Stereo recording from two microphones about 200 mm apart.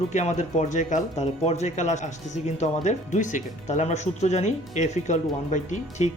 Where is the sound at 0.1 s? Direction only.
35° left (ahead or behind).